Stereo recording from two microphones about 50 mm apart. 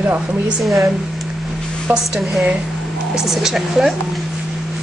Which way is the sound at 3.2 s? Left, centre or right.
Centre.